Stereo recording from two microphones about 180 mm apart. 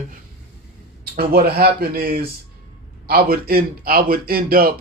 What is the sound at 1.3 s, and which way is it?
A man's voice, 60° right (ahead or behind).